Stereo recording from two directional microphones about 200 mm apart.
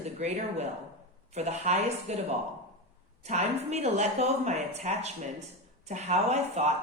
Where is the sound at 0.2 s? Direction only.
35° right (ahead or behind).